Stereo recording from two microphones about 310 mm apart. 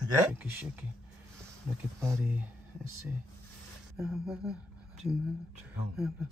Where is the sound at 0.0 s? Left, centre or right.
Centre.